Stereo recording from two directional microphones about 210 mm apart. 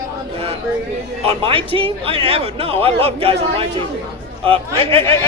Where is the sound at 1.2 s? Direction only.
25° right (ahead or behind).